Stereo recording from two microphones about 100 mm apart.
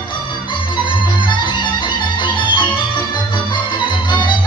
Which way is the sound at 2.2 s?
50° left (ahead or behind).